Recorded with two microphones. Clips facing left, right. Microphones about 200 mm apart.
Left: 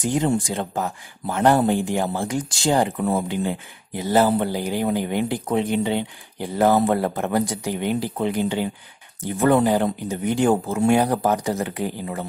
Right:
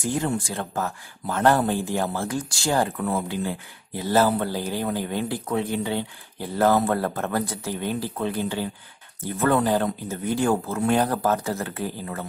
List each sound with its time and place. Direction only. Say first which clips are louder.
0.0 s speech: left 4 dB; 20° left (ahead or behind)